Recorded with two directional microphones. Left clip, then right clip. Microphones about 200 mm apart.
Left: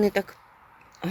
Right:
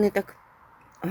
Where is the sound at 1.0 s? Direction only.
10° right (ahead or behind).